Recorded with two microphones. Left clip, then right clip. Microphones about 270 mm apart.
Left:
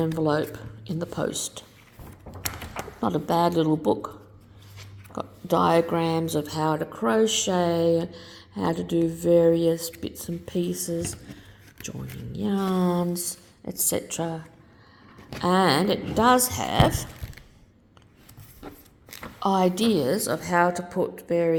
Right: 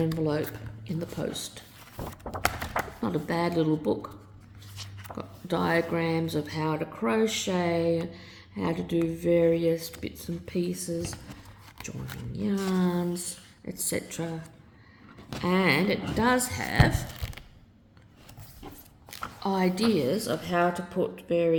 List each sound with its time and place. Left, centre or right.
0.2 s a woman's voice: left
2.0 s a sound: right
3.0 s a woman's voice: centre
5.1 s a woman's voice: left
12.4 s a woman's voice: left
16.9 s a sound: centre
19.4 s a woman's voice: left